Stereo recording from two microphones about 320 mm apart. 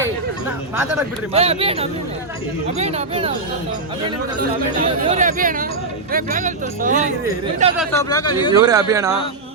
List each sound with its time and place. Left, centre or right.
1.3 s speech: centre
4.4 s speech: right
7.8 s speech: centre
8.6 s speech: centre